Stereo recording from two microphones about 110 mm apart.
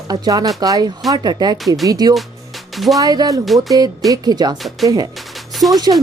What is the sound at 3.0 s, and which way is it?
Speech, 35° right (ahead or behind).